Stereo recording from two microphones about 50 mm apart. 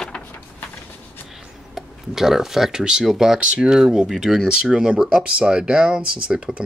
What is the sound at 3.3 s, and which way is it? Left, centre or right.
Speech, centre.